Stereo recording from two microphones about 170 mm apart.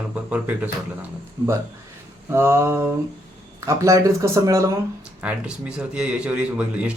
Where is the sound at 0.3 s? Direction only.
10° right (ahead or behind).